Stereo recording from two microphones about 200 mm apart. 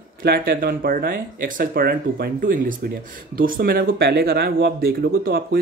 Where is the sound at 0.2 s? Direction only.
50° right (ahead or behind).